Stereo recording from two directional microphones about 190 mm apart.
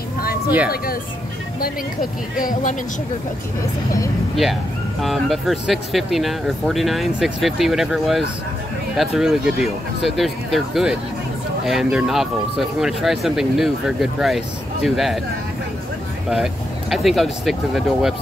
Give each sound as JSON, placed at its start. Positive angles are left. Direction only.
{"t": 2.3, "sound": "speech", "side_deg": 45}
{"t": 5.0, "sound": "speech", "side_deg": 0}
{"t": 16.9, "sound": "speech", "side_deg": 0}